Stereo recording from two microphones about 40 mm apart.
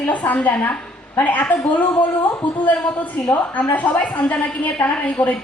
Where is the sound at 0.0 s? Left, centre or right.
Left.